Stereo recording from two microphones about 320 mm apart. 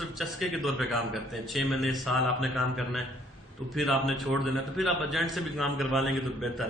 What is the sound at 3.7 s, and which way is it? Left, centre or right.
A man's voice, centre.